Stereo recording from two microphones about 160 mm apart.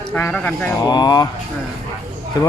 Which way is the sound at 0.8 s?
25° left (ahead or behind).